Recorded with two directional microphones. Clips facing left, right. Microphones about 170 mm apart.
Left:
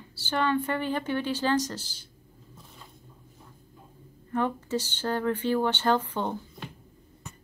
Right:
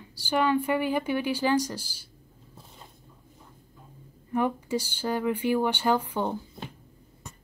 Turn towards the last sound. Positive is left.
turn(degrees=-10)  # may be behind; listen again after turning